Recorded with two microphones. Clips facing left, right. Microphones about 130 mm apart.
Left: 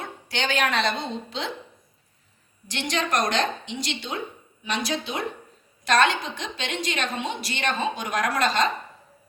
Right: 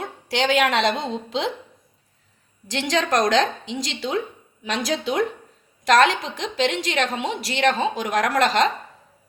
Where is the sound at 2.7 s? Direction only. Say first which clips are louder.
Right 5 dB; 90° right.